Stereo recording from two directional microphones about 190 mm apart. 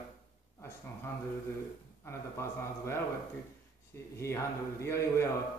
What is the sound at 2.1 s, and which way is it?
A man's voice, 15° left (ahead or behind).